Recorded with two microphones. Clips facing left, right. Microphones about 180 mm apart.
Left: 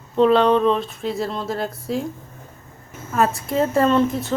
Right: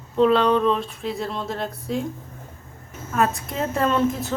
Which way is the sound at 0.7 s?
Centre (ahead or behind).